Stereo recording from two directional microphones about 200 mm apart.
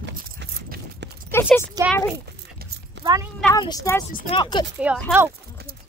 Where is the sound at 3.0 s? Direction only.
60° right (ahead or behind).